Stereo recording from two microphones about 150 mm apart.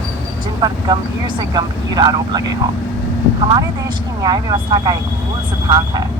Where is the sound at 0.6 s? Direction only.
30° right (ahead or behind).